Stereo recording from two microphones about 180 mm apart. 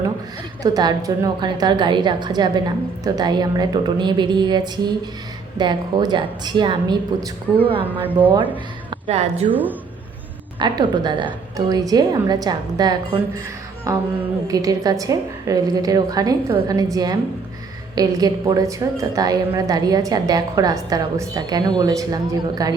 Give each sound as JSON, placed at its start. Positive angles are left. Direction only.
{"t": 0.6, "sound": "a woman's voice", "side_deg": -20}
{"t": 8.0, "sound": "speech", "side_deg": -10}
{"t": 9.0, "sound": "a woman's voice", "side_deg": -35}
{"t": 10.6, "sound": "a woman's voice", "side_deg": -25}
{"t": 14.4, "sound": "a woman's voice", "side_deg": -20}